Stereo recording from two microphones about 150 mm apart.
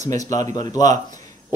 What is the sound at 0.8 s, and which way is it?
Speech, 55° right (ahead or behind).